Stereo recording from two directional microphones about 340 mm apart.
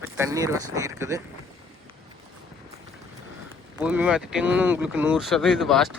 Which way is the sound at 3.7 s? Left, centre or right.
Centre.